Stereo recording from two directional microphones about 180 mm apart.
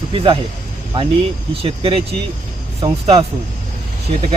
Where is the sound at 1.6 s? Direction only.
30° right (ahead or behind).